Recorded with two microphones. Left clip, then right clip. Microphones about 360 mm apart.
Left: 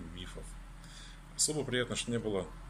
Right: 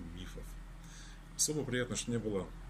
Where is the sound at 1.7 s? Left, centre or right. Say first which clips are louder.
Left 3 dB; centre.